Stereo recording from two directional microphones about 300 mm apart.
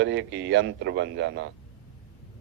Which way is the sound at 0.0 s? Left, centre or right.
Right.